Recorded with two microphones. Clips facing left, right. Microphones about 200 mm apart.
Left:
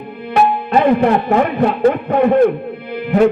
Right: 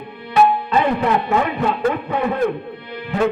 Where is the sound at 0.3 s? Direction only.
40° left (ahead or behind).